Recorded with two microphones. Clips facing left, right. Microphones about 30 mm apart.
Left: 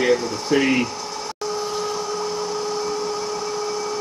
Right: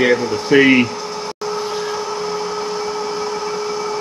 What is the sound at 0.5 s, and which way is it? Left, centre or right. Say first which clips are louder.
Speech: right 7 dB; right.